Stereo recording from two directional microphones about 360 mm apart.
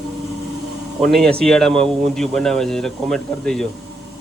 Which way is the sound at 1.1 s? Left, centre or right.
Centre.